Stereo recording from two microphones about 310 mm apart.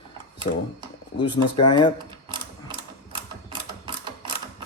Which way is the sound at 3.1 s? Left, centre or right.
Centre.